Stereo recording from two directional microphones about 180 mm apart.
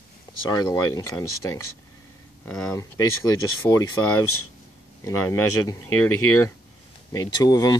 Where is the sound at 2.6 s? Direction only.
20° left (ahead or behind).